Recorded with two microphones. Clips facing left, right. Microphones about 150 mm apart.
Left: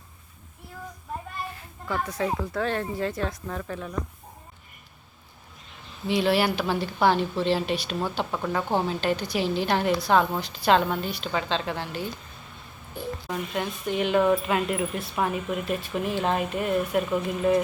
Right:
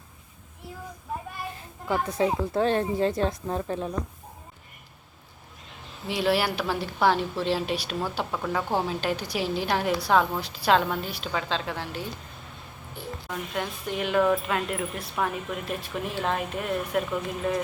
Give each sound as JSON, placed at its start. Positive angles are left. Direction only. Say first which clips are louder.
{"t": 1.5, "sound": "speech", "louder": "right 4 dB", "side_deg": -25}
{"t": 6.1, "sound": "speech", "louder": "left 2 dB", "side_deg": -5}
{"t": 13.2, "sound": "speech", "louder": "left 1 dB", "side_deg": 5}